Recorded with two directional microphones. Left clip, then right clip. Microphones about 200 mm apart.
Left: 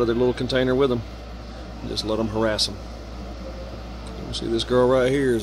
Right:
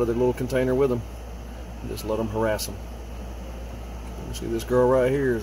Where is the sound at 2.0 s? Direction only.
20° left (ahead or behind).